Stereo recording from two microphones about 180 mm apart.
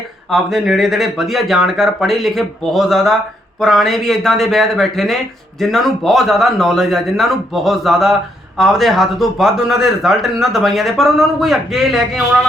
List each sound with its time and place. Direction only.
0.3 s a man's voice: centre (ahead or behind)